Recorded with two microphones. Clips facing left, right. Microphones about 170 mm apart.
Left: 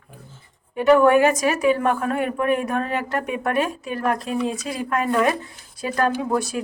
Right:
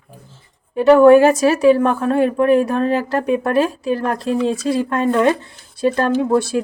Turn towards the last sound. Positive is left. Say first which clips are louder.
# right 7 dB
turn(degrees=-30)  # may be behind; listen again after turning